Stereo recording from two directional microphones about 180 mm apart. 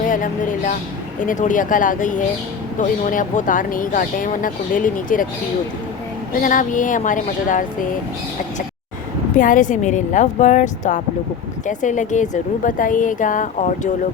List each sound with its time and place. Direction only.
0.0 s speech: 50° left (ahead or behind)
6.4 s speech: 50° left (ahead or behind)
9.4 s speech: 45° left (ahead or behind)